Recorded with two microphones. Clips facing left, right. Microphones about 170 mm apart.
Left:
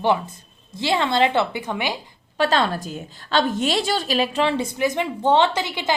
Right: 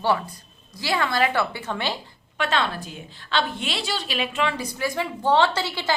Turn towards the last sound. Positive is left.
turn(degrees=15)  # may be behind; listen again after turning